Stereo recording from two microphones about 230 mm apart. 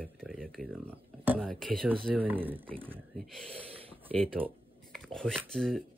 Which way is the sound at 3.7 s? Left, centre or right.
Right.